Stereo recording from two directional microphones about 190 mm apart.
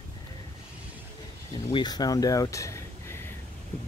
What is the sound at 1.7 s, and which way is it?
Speech, 20° left (ahead or behind).